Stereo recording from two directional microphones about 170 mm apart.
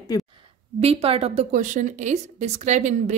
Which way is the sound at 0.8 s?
35° right (ahead or behind).